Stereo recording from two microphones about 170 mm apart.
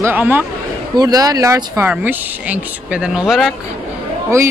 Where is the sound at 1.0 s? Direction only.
20° right (ahead or behind); by 3.6 s centre (ahead or behind).